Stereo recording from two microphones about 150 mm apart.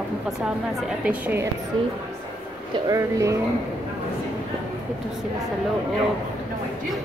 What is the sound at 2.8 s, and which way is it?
Speech, 20° right (ahead or behind).